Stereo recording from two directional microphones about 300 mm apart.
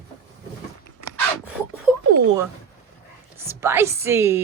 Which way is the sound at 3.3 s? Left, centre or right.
Centre.